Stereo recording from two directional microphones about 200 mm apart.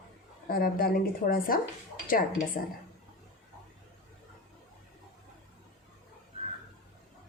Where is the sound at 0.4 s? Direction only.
50° left (ahead or behind).